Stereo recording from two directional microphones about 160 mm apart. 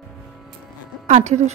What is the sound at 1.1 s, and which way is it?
Speech, 45° right (ahead or behind).